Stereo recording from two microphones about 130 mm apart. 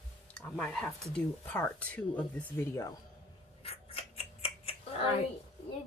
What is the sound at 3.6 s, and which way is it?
Scissors, 50° left (ahead or behind).